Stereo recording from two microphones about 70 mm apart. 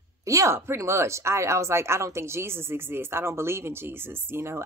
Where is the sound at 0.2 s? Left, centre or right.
Right.